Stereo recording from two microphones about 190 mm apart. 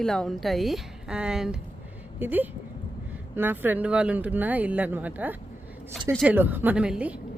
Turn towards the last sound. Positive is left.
turn(degrees=-5)  # may be behind; listen again after turning